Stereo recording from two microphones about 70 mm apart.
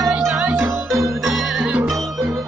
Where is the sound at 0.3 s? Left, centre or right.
Right.